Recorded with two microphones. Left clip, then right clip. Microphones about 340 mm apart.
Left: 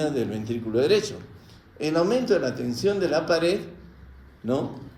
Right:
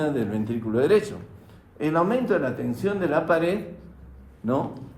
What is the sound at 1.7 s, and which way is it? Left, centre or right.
A man's voice, right.